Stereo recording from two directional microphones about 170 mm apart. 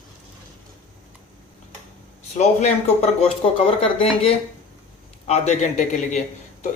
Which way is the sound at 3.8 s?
35° left (ahead or behind).